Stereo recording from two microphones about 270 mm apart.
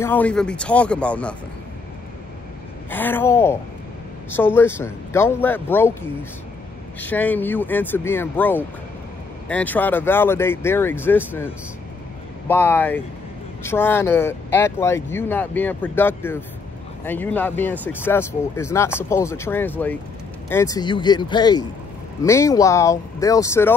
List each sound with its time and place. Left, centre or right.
0.0 s speech: centre
2.9 s speech: centre